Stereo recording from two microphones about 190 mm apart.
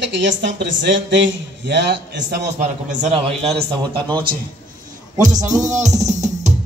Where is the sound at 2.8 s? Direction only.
35° right (ahead or behind).